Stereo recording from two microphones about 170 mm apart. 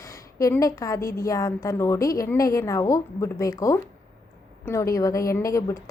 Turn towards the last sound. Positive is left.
turn(degrees=20)  # may be behind; listen again after turning